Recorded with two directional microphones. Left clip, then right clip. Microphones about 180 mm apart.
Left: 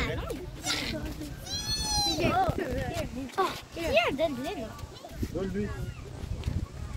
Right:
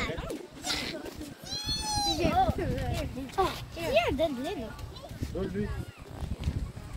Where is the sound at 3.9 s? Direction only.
50° right (ahead or behind).